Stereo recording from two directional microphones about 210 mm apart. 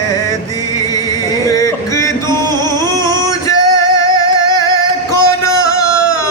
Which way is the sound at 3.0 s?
15° left (ahead or behind).